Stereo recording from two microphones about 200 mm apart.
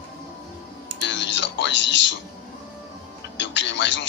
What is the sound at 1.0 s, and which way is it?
Music, 65° left (ahead or behind).